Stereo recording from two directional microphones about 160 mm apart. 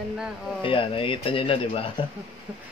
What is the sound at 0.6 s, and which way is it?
Speech, 35° left (ahead or behind).